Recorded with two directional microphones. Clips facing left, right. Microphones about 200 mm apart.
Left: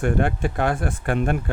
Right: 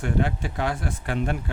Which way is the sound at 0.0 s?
55° left (ahead or behind).